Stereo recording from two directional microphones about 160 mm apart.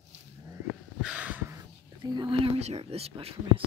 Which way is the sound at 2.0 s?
25° right (ahead or behind).